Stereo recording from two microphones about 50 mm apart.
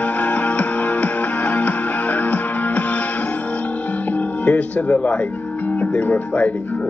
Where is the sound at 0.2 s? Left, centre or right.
Left.